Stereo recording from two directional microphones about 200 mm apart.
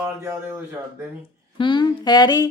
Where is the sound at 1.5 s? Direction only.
25° left (ahead or behind).